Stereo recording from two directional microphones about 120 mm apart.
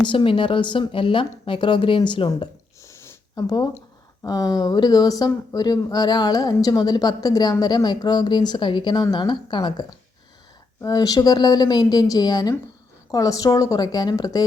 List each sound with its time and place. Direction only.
0.0 s speech: 40° left (ahead or behind)
2.8 s a sound: 30° left (ahead or behind)
4.2 s speech: 30° left (ahead or behind)